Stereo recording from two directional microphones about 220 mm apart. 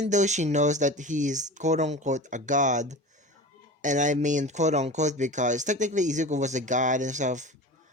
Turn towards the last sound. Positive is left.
turn(degrees=-35)  # may be behind; listen again after turning